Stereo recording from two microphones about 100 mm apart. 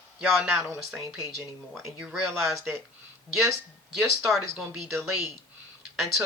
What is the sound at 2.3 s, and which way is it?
Speech, 25° right (ahead or behind).